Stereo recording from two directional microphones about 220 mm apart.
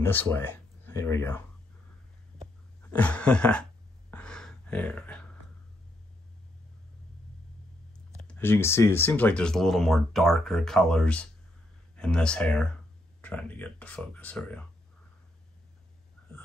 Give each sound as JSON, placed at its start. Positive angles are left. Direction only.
{"t": 0.0, "sound": "speech", "side_deg": 10}
{"t": 2.9, "sound": "speech", "side_deg": 5}
{"t": 4.1, "sound": "a sound", "side_deg": 5}
{"t": 8.2, "sound": "speech", "side_deg": 5}